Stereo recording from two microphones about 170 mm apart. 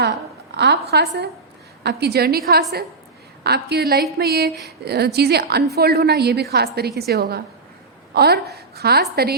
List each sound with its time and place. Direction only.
0.5 s a woman's voice: 80° right